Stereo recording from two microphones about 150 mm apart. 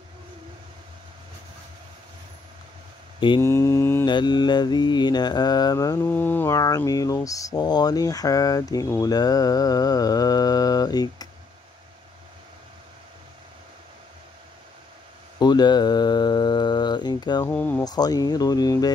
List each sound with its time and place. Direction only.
3.3 s mantra: 15° left (ahead or behind)
4.0 s mantra: 30° left (ahead or behind)
15.3 s mantra: 30° left (ahead or behind)
17.5 s mantra: 10° left (ahead or behind)
17.8 s mantra: 25° left (ahead or behind)